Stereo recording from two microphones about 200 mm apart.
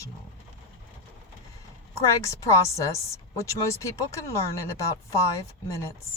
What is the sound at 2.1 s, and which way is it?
Speech, 15° left (ahead or behind).